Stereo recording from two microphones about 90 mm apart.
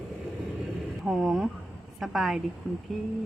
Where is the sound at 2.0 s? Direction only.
Centre (ahead or behind).